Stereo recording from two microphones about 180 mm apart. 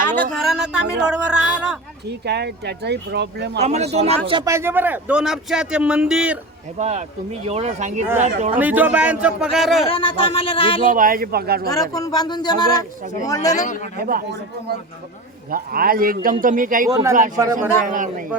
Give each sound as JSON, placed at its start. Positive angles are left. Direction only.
{"t": 0.2, "sound": "a man's voice", "side_deg": 0}
{"t": 2.0, "sound": "speech", "side_deg": -70}
{"t": 3.6, "sound": "speech", "side_deg": -40}
{"t": 4.5, "sound": "a man's voice", "side_deg": -10}
{"t": 6.7, "sound": "speech", "side_deg": -40}
{"t": 8.5, "sound": "a man's voice", "side_deg": -10}
{"t": 9.8, "sound": "speech", "side_deg": 30}
{"t": 10.8, "sound": "a man's voice", "side_deg": -50}
{"t": 11.7, "sound": "speech", "side_deg": 20}
{"t": 14.0, "sound": "a man's voice", "side_deg": -55}
{"t": 15.4, "sound": "a man's voice", "side_deg": -55}
{"t": 16.9, "sound": "a man's voice", "side_deg": -15}
{"t": 17.8, "sound": "a man's voice", "side_deg": -45}